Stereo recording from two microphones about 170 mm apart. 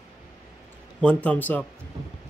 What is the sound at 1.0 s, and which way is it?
Speech, 5° left (ahead or behind).